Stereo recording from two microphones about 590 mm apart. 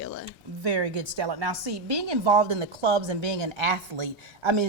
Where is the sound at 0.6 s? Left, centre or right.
Right.